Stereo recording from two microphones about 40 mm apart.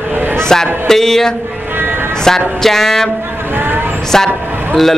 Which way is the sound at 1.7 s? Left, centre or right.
Right.